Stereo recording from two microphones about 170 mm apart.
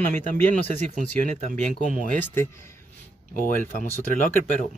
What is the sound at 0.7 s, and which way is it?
Speech, 45° right (ahead or behind).